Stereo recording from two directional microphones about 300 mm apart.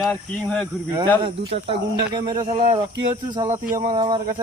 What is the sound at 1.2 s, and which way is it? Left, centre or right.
Speech, centre.